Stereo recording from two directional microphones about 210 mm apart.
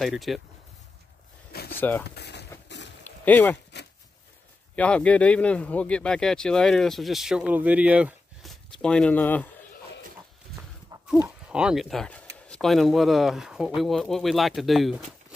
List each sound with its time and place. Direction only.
0.0 s speech: centre (ahead or behind)
1.5 s a sound: 50° left (ahead or behind)
1.8 s speech: 10° left (ahead or behind)
2.0 s speech: 50° left (ahead or behind)
3.0 s a sound: 10° left (ahead or behind)
4.7 s speech: 5° left (ahead or behind)
10.9 s livestock: 20° right (ahead or behind)
11.2 s speech: 5° right (ahead or behind)